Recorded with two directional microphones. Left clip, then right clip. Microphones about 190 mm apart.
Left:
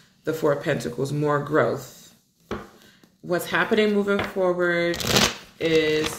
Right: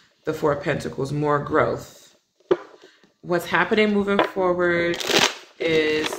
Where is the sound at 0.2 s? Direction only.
40° right (ahead or behind).